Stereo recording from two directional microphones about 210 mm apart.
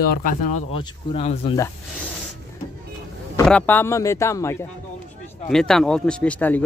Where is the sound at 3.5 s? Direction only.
5° left (ahead or behind).